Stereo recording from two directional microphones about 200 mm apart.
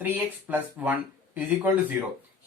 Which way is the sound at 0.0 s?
10° right (ahead or behind).